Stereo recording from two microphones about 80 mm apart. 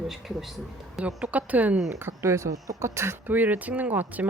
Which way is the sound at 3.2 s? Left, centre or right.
Right.